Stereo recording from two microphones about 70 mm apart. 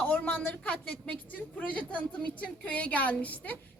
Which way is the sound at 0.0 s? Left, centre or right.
Left.